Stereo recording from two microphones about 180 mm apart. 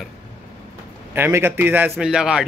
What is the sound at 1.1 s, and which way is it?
A man's voice, 10° right (ahead or behind).